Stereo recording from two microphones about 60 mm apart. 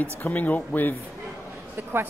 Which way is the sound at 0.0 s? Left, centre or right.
Left.